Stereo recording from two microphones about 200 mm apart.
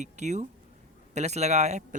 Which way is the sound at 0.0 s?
35° right (ahead or behind).